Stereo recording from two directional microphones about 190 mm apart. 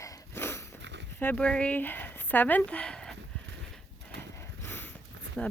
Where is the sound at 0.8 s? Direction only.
65° right (ahead or behind).